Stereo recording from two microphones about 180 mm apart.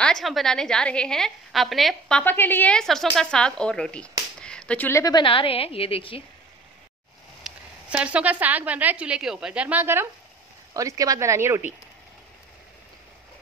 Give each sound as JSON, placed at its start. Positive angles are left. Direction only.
{"t": 0.0, "sound": "a woman's voice", "side_deg": 0}
{"t": 7.4, "sound": "a woman's voice", "side_deg": -5}